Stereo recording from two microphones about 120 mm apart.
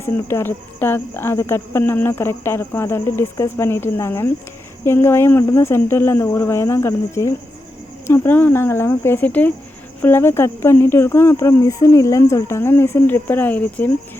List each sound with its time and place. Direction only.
0.0 s speech: 20° left (ahead or behind)